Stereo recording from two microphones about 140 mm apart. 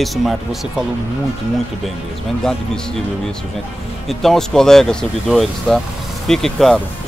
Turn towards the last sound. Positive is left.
turn(degrees=5)  # may be behind; listen again after turning